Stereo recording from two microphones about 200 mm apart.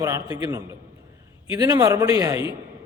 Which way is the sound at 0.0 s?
15° right (ahead or behind).